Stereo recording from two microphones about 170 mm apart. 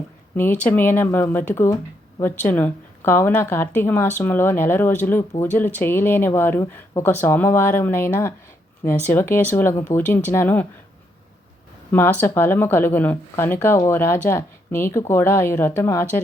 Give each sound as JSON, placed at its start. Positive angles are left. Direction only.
{"t": 0.3, "sound": "speech", "side_deg": 10}
{"t": 11.9, "sound": "speech", "side_deg": 10}